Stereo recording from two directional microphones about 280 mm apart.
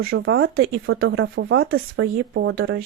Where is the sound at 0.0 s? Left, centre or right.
Right.